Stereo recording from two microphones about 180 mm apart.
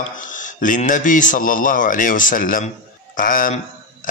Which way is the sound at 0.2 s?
45° left (ahead or behind).